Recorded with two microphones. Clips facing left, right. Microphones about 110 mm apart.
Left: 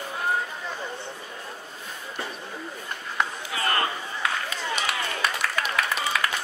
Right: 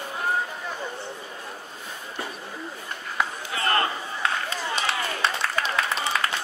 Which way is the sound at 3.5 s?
30° right (ahead or behind).